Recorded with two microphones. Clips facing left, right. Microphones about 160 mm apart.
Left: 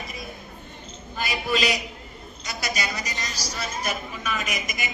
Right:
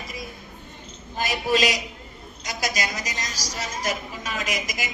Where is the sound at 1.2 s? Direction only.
40° right (ahead or behind).